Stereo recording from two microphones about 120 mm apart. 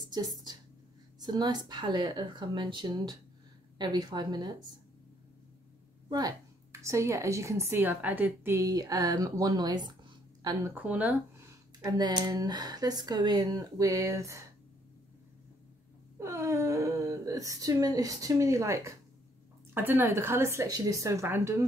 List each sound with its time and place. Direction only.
0.1 s speech: 35° right (ahead or behind)
6.0 s a woman's voice: 30° right (ahead or behind)
10.7 s speech: 10° right (ahead or behind)
11.8 s speech: 35° right (ahead or behind)
16.2 s a sound: 25° right (ahead or behind)
19.7 s a woman's voice: 15° right (ahead or behind)